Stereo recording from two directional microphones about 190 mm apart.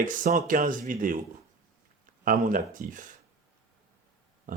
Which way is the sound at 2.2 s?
45° right (ahead or behind).